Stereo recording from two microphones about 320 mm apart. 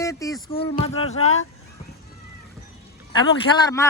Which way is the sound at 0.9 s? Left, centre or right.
Left.